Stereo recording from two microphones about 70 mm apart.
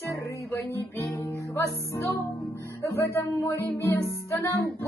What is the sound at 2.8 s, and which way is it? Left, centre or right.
Music, left.